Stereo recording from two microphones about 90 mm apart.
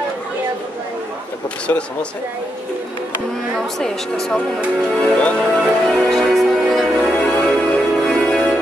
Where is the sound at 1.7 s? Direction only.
25° left (ahead or behind).